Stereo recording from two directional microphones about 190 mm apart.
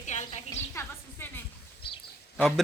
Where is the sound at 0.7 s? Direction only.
15° left (ahead or behind).